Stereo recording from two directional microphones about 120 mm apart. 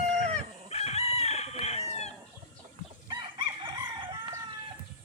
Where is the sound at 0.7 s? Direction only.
60° left (ahead or behind).